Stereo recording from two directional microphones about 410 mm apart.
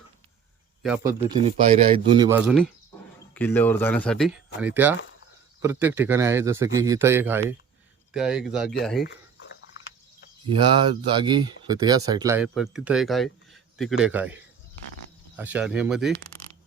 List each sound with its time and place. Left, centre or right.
0.8 s a man's voice: centre
9.0 s a sound: left
10.6 s speech: centre
15.4 s speech: centre